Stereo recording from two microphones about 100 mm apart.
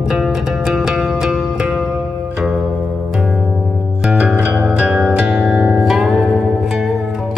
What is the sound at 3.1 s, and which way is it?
Music, 5° right (ahead or behind).